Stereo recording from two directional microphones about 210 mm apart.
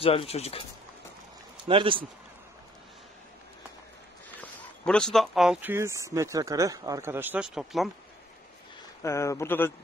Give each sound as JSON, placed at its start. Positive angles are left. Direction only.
{"t": 0.0, "sound": "speech", "side_deg": 25}
{"t": 1.7, "sound": "speech", "side_deg": -25}
{"t": 4.4, "sound": "speech", "side_deg": 5}
{"t": 9.0, "sound": "speech", "side_deg": 15}